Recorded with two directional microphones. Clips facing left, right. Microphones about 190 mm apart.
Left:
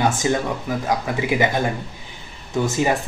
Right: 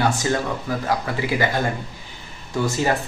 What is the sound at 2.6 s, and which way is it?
Speech, 15° left (ahead or behind).